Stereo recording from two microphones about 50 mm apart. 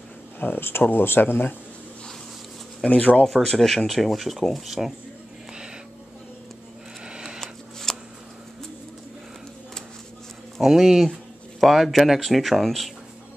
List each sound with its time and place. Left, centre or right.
0.4 s speech: left
2.9 s speech: left
3.3 s speech: centre
7.1 s a sound: centre
7.3 s a sound: centre
10.6 s speech: centre